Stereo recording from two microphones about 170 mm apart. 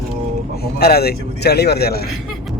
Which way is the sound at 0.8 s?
65° left (ahead or behind).